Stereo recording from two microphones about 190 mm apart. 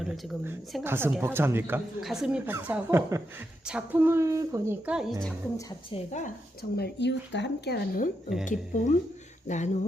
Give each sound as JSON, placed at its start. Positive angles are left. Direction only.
{"t": 0.9, "sound": "a woman's voice", "side_deg": -10}
{"t": 5.9, "sound": "speech", "side_deg": 40}
{"t": 8.4, "sound": "speech", "side_deg": 40}